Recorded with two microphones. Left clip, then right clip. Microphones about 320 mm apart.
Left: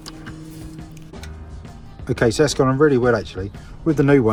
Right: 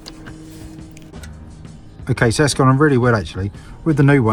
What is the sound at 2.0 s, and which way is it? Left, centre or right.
Speech, centre.